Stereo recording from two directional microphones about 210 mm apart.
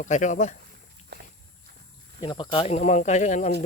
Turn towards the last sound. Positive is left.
turn(degrees=35)  # may be behind; listen again after turning